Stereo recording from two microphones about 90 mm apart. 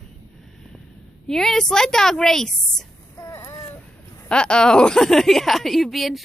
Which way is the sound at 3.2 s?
25° left (ahead or behind).